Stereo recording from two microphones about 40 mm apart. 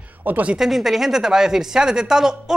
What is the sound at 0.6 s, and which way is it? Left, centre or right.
Speech, centre.